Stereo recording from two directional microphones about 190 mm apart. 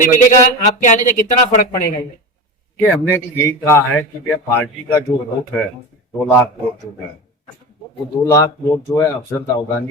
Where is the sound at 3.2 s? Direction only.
15° left (ahead or behind).